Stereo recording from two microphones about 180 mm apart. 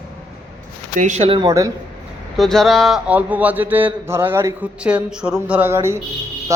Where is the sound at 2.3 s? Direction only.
Centre (ahead or behind).